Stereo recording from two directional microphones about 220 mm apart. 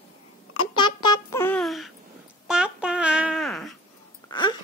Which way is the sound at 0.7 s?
20° left (ahead or behind).